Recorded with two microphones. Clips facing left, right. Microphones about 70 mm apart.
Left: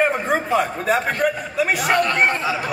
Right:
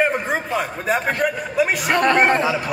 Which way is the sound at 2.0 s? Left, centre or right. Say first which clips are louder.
Right 4 dB; right.